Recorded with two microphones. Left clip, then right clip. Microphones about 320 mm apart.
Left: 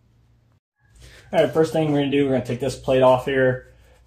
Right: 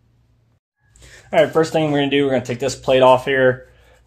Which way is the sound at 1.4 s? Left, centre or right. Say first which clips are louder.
Right 3 dB; right.